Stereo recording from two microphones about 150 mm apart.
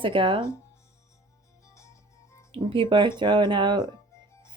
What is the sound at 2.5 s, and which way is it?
A woman's voice, 35° right (ahead or behind).